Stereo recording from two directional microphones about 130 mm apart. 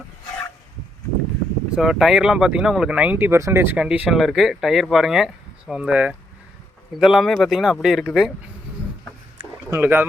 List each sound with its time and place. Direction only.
1.7 s speech: 5° right (ahead or behind); by 3.8 s 20° right (ahead or behind)
3.8 s speech: 5° right (ahead or behind)
9.6 s speech: 20° right (ahead or behind)